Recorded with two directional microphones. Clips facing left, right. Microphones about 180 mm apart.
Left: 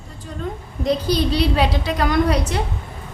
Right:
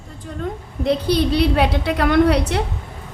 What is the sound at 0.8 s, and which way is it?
A woman's voice, 65° right (ahead or behind).